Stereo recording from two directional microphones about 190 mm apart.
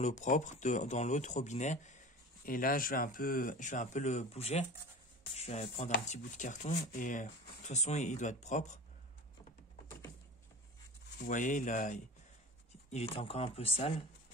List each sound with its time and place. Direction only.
0.0 s speech: 40° left (ahead or behind)
11.2 s speech: 40° left (ahead or behind)